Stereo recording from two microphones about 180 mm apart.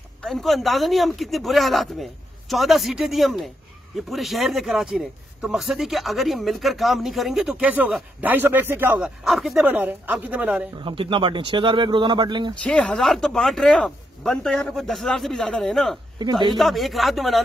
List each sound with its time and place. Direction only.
0.2 s speech: centre (ahead or behind)
10.8 s speech: 30° right (ahead or behind)
12.6 s speech: 5° left (ahead or behind)
16.2 s speech: 25° right (ahead or behind)
16.5 s speech: centre (ahead or behind)